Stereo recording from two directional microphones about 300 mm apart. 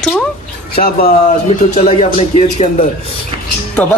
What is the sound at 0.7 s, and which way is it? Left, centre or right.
Speech, left.